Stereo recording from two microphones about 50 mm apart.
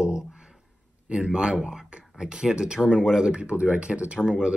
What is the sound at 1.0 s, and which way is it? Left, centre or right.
Speech, centre.